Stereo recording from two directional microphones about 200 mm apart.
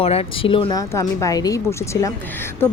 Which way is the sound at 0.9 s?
15° left (ahead or behind).